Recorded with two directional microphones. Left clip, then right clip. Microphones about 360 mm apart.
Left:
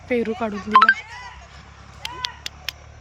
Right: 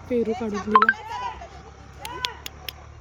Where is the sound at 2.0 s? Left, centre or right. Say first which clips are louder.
Left 1 dB; centre.